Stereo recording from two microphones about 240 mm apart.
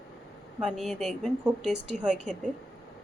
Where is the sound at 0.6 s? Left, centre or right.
Centre.